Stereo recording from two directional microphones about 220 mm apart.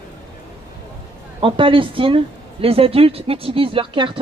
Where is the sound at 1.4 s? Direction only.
25° right (ahead or behind).